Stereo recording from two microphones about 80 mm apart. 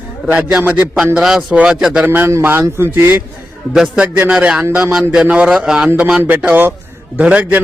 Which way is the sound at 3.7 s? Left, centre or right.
Centre.